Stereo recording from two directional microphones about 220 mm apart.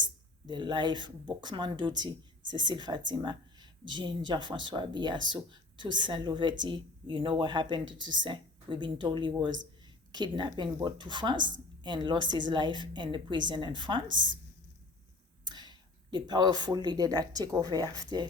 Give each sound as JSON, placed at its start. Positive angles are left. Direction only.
{"t": 0.0, "sound": "speech", "side_deg": -20}
{"t": 15.4, "sound": "speech", "side_deg": -20}